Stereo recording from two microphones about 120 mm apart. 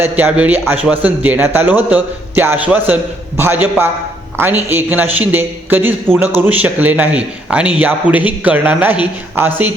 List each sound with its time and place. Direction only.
0.0 s a man's voice: 15° right (ahead or behind)